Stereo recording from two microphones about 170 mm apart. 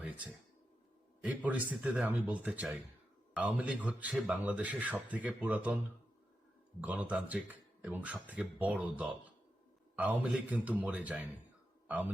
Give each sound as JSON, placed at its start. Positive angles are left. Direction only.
{"t": 1.2, "sound": "speech", "side_deg": -10}
{"t": 6.8, "sound": "a man's voice", "side_deg": -10}